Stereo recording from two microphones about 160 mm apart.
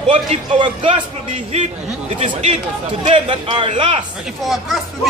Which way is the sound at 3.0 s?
35° right (ahead or behind).